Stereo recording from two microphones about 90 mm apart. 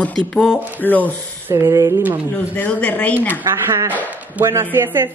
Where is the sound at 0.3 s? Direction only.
10° left (ahead or behind).